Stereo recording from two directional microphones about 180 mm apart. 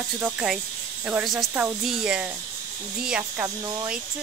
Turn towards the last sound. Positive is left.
turn(degrees=-5)  # may be behind; listen again after turning